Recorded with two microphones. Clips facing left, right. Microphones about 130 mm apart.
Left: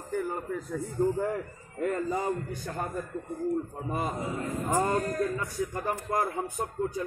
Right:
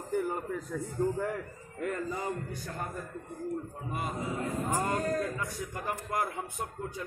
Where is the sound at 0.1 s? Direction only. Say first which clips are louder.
Even; 15° right (ahead or behind).